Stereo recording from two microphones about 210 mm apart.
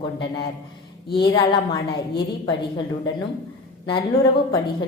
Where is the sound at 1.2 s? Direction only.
20° left (ahead or behind).